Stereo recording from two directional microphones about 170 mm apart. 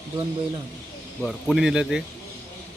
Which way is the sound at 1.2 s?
Centre (ahead or behind).